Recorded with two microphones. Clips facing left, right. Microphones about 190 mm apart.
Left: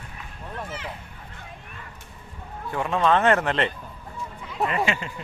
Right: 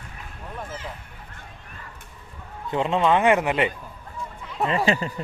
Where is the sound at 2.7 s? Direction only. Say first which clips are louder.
Right 1 dB; 20° right (ahead or behind).